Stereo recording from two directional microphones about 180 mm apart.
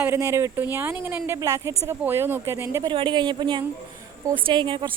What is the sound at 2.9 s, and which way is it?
A woman's voice, 25° right (ahead or behind).